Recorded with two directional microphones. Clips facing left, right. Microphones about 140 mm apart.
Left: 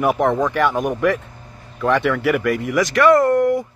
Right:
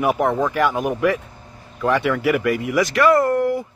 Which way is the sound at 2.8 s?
30° right (ahead or behind).